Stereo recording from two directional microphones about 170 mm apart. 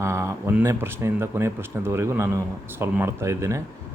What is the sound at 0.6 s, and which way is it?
A man's voice, 15° right (ahead or behind).